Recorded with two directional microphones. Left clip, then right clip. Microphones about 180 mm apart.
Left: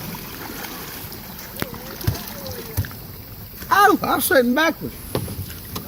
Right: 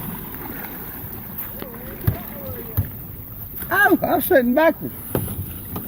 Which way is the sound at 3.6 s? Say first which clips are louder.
Left 2 dB; 55° left (ahead or behind).